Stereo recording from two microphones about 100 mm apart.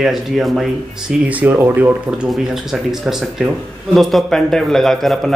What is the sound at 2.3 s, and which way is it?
A man's voice, 5° right (ahead or behind).